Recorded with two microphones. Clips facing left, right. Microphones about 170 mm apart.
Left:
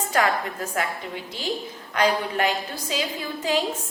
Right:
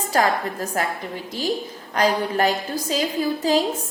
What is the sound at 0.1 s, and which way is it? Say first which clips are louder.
A woman's voice: right 3 dB; 35° right (ahead or behind).